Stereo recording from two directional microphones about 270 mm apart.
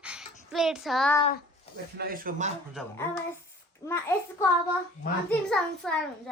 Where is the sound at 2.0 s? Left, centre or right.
Right.